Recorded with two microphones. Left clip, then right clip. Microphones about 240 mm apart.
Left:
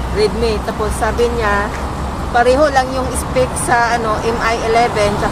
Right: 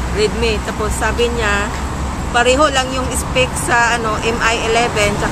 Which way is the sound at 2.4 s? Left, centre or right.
Centre.